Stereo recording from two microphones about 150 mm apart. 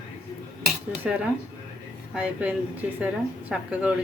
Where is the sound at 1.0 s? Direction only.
10° right (ahead or behind).